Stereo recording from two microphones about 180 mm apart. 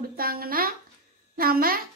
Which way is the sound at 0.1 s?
55° right (ahead or behind).